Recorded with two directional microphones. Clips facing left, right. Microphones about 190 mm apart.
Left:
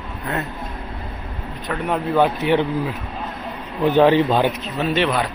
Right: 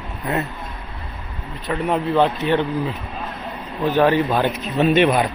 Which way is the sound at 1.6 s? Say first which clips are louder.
Right 2 dB; centre (ahead or behind).